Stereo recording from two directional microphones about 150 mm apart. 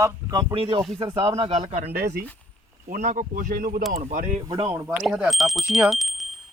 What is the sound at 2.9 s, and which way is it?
Speech, 55° right (ahead or behind).